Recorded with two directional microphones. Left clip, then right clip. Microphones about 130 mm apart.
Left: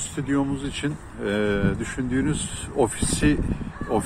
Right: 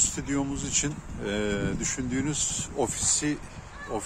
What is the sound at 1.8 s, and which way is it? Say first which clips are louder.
Speech: left 4 dB; 20° right (ahead or behind).